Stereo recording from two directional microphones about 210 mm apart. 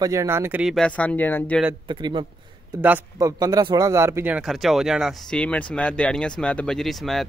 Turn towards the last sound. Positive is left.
turn(degrees=0)  # may be behind; listen again after turning